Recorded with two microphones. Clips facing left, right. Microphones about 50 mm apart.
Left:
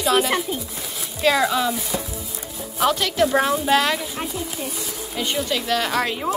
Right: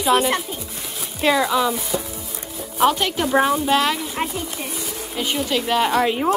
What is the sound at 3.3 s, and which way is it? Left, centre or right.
Speech, centre.